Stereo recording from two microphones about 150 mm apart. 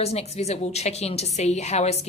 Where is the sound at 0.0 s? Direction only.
45° left (ahead or behind).